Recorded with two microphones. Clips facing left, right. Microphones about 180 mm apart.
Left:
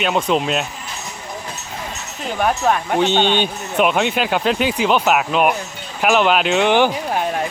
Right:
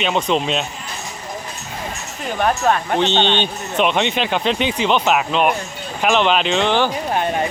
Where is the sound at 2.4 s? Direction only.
10° left (ahead or behind).